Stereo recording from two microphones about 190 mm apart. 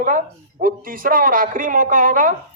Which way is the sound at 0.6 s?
45° right (ahead or behind).